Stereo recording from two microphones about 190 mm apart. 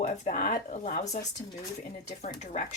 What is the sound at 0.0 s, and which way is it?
Speech, 40° left (ahead or behind).